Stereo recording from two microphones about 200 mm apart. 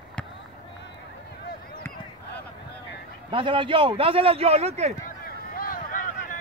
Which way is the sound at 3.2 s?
25° right (ahead or behind).